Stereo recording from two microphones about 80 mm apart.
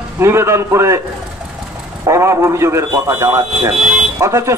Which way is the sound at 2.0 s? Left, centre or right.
Right.